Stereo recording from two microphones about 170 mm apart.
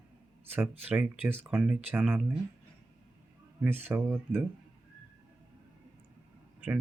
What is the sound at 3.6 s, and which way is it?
Speech, 10° right (ahead or behind).